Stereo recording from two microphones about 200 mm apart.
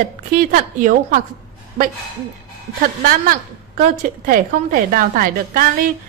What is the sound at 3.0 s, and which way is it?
A woman's voice, 45° right (ahead or behind).